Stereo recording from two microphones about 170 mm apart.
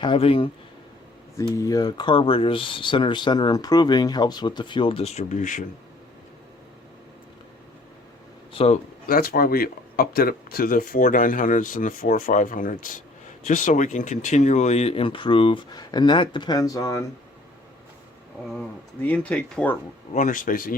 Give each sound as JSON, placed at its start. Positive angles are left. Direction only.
{"t": 0.0, "sound": "speech", "side_deg": 30}
{"t": 1.5, "sound": "speech", "side_deg": 20}
{"t": 8.5, "sound": "speech", "side_deg": 40}
{"t": 9.0, "sound": "speech", "side_deg": 60}
{"t": 19.0, "sound": "speech", "side_deg": 10}
{"t": 20.1, "sound": "speech", "side_deg": 50}